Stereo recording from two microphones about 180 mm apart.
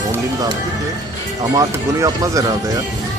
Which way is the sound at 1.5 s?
20° right (ahead or behind).